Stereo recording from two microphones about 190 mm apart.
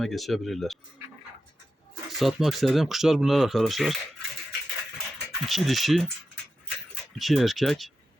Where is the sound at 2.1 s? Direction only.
Centre (ahead or behind).